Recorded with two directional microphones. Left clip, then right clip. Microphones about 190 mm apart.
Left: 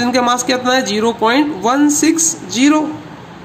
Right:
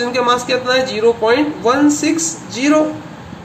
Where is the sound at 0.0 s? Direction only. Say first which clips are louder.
Left 1 dB; 55° left (ahead or behind).